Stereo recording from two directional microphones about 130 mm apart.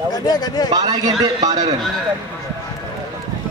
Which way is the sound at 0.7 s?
30° right (ahead or behind).